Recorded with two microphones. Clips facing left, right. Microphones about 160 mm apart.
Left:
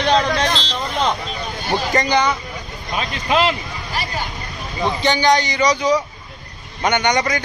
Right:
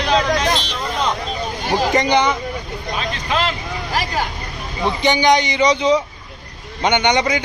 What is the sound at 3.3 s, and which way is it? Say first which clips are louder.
Speech: left 4 dB; 10° left (ahead or behind).